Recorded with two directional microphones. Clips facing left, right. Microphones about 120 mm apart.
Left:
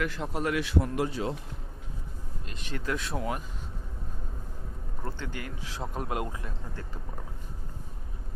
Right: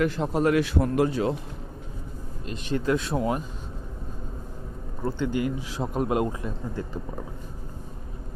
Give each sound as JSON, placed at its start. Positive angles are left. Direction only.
{"t": 0.0, "sound": "a man's voice", "side_deg": -30}
{"t": 2.5, "sound": "speech", "side_deg": -25}
{"t": 5.0, "sound": "speech", "side_deg": -15}